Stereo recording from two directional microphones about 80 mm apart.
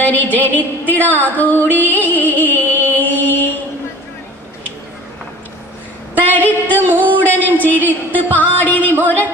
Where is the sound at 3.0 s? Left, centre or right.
Left.